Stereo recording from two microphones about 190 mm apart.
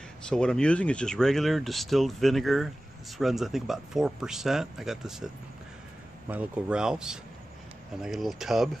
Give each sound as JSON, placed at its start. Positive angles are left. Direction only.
{"t": 0.3, "sound": "speech", "side_deg": 5}